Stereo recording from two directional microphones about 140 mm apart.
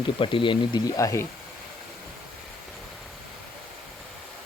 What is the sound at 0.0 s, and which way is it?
Speech, 35° left (ahead or behind).